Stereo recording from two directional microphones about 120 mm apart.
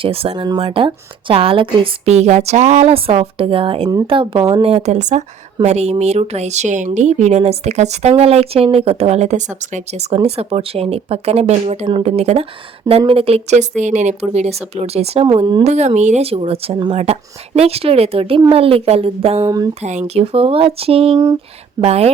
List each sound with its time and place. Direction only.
0.0 s speech: 55° right (ahead or behind)
0.3 s speech: 35° right (ahead or behind)
0.6 s speech: 45° right (ahead or behind)
2.0 s speech: 70° right (ahead or behind); by 4.4 s 45° right (ahead or behind)
4.6 s speech: 65° right (ahead or behind)
13.0 s speech: 50° right (ahead or behind)
15.3 s speech: 40° right (ahead or behind)
15.6 s speech: 65° right (ahead or behind)
19.4 s speech: 30° right (ahead or behind)
19.8 s speech: 70° right (ahead or behind)